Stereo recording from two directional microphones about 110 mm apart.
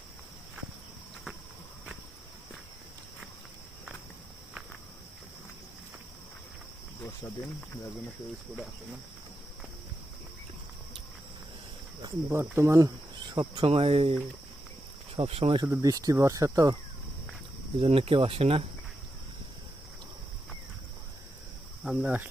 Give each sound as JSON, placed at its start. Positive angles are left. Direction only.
{"t": 12.3, "sound": "speech", "side_deg": -25}
{"t": 13.3, "sound": "speech", "side_deg": -40}
{"t": 13.7, "sound": "speech", "side_deg": -60}
{"t": 15.6, "sound": "speech", "side_deg": -25}
{"t": 15.9, "sound": "speech", "side_deg": -35}
{"t": 17.7, "sound": "speech", "side_deg": -60}
{"t": 21.8, "sound": "speech", "side_deg": -10}